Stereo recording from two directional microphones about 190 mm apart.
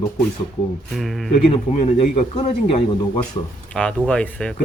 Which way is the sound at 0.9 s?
Centre (ahead or behind).